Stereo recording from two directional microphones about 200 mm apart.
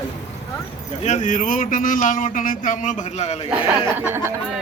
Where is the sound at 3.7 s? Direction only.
10° right (ahead or behind).